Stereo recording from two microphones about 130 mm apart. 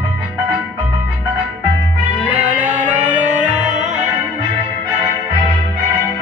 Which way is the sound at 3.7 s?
70° right (ahead or behind).